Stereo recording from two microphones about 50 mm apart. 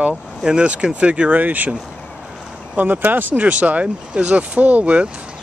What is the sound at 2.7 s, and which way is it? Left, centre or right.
Speech, right.